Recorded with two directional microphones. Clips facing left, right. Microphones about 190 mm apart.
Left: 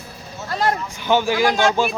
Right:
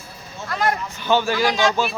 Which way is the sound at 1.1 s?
15° left (ahead or behind).